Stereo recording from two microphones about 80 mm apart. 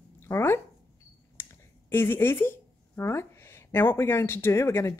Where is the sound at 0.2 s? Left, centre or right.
Left.